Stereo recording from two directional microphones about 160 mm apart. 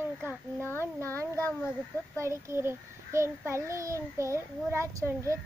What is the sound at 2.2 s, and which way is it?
A child's voice, 15° right (ahead or behind).